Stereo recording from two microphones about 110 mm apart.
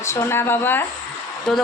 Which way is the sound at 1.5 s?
5° left (ahead or behind).